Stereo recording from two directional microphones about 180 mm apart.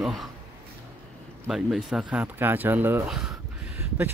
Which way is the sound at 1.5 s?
Centre (ahead or behind).